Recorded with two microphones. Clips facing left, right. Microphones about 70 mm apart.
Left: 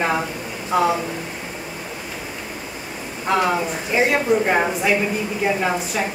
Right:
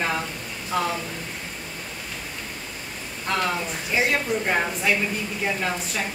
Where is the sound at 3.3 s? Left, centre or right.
Centre.